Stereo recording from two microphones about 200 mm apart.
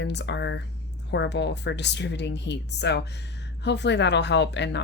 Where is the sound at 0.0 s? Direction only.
60° left (ahead or behind).